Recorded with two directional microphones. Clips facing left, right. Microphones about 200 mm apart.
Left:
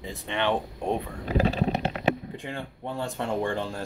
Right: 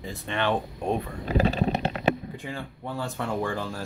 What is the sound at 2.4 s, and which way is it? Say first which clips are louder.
Speech: even; 20° left (ahead or behind).